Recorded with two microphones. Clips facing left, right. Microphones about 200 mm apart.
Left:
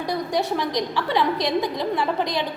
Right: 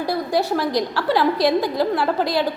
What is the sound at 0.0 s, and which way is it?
A woman's voice, 5° right (ahead or behind).